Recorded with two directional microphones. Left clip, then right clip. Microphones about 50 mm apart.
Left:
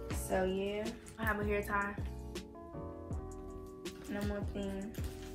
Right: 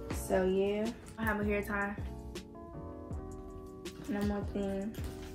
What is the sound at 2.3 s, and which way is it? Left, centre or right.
Music, centre.